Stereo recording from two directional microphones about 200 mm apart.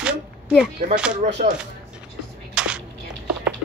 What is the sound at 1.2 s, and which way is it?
Speech, 40° right (ahead or behind).